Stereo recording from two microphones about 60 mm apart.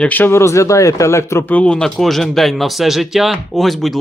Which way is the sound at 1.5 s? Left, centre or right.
Left.